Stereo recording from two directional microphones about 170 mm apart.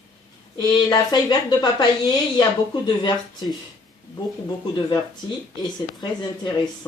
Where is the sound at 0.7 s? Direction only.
25° left (ahead or behind).